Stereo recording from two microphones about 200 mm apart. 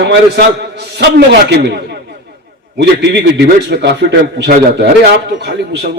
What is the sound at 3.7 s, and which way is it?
A man's voice, 55° right (ahead or behind).